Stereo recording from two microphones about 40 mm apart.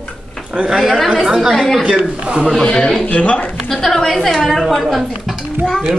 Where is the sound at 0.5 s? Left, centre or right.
Right.